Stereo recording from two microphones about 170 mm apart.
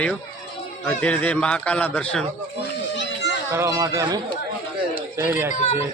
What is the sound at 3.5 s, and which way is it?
Speech, 15° right (ahead or behind).